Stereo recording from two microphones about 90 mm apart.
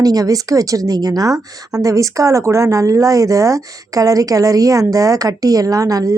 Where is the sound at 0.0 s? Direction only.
45° right (ahead or behind).